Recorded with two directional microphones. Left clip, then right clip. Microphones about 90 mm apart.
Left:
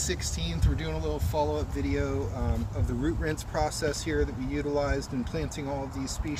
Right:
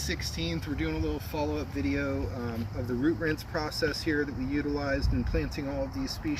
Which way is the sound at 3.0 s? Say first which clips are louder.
Right 3 dB; 65° left (ahead or behind).